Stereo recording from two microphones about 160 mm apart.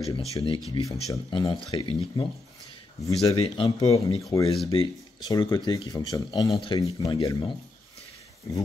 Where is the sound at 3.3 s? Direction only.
35° left (ahead or behind).